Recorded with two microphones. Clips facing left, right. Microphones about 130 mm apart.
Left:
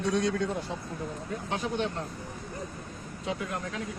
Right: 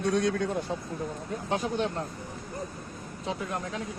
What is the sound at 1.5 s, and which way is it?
Speech, 45° right (ahead or behind).